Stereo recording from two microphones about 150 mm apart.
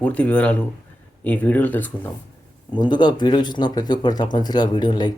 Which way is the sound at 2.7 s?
30° left (ahead or behind).